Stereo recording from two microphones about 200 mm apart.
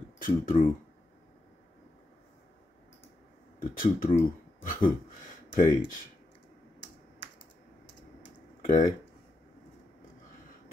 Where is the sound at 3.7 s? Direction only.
45° left (ahead or behind).